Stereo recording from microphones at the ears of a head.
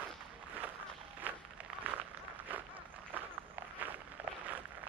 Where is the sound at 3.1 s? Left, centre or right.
Right.